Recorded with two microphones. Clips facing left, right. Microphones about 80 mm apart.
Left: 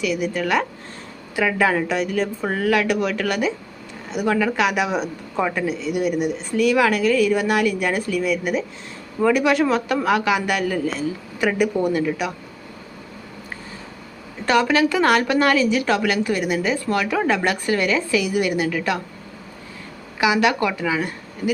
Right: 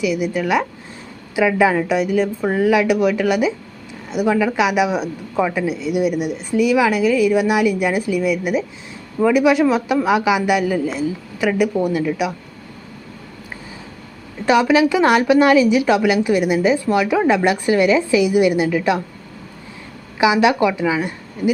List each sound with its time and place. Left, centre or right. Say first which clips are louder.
0.0 s speech: right 3 dB; centre
14.4 s speech: right 4 dB; centre
20.1 s a woman's voice: right 4 dB; centre